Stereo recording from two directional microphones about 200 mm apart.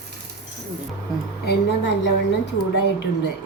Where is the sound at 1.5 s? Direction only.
55° left (ahead or behind).